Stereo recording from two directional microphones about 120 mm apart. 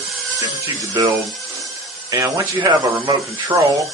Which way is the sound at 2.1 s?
25° right (ahead or behind).